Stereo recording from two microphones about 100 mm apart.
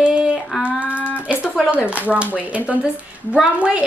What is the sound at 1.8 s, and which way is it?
Speech, 15° right (ahead or behind).